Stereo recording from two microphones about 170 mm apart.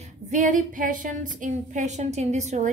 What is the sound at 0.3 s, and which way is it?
A woman's voice, 50° right (ahead or behind).